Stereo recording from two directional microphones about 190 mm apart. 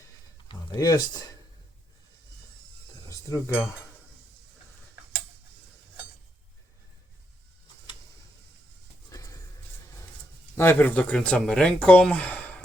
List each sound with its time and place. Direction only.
0.4 s speech: 20° left (ahead or behind)
3.1 s speech: 15° left (ahead or behind)
9.0 s music: 20° left (ahead or behind)
10.5 s speech: 10° left (ahead or behind)